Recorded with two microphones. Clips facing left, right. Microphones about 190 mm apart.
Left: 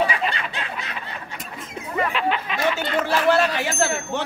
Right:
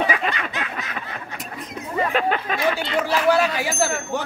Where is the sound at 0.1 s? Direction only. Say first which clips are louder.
Right 2 dB; 30° left (ahead or behind).